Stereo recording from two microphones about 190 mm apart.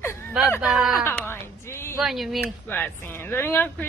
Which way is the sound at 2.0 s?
Centre (ahead or behind).